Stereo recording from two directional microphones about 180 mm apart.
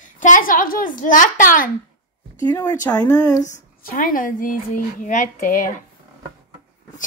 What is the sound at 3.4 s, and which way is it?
A woman's voice, 45° left (ahead or behind).